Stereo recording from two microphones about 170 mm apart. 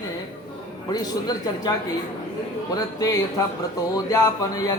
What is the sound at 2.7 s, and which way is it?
Speech, 20° left (ahead or behind).